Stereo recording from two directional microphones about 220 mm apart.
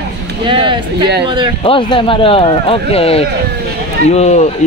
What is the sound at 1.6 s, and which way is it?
Speech, 25° left (ahead or behind).